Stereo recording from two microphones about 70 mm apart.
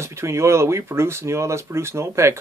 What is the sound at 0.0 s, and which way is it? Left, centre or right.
Speech, right.